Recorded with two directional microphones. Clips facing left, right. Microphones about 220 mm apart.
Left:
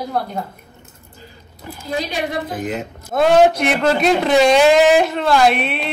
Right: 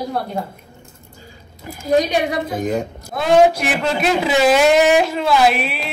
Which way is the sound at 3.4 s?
5° right (ahead or behind).